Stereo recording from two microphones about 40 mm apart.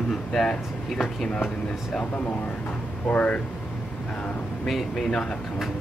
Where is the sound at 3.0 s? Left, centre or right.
Left.